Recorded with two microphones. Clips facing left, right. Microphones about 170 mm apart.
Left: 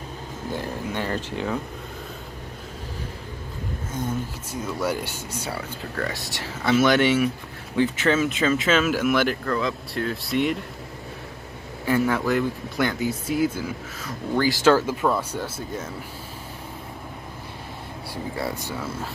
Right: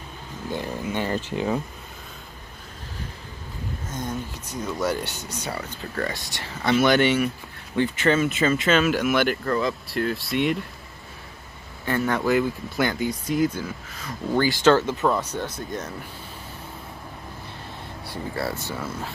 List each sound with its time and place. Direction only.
1.1 s speech: 10° right (ahead or behind)
3.9 s speech: 10° left (ahead or behind)
11.8 s speech: 5° left (ahead or behind)
18.3 s speech: 15° left (ahead or behind)